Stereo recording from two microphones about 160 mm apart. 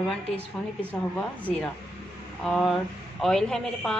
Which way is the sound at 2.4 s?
5° left (ahead or behind).